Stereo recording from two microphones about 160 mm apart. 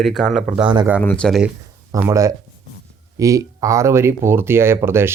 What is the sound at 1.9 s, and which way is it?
Speech, 15° right (ahead or behind).